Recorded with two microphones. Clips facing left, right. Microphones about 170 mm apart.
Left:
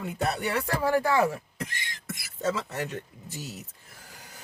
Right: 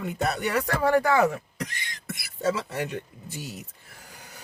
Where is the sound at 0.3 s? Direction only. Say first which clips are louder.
Right 2 dB; 35° left (ahead or behind).